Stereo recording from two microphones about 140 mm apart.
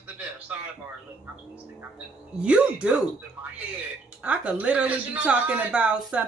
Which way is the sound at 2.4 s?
10° right (ahead or behind).